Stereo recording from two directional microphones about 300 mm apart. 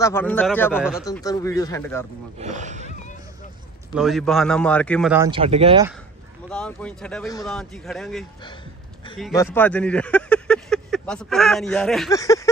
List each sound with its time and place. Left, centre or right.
0.0 s speech: centre
1.0 s speech: centre
2.3 s speech: right
3.9 s speech: centre
5.3 s speech: centre
6.5 s speech: centre
9.3 s speech: centre